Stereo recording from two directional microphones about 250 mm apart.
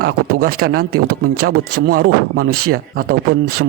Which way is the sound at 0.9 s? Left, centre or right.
Right.